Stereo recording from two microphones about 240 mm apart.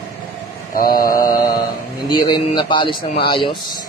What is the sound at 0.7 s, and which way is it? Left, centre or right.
Mantra, left.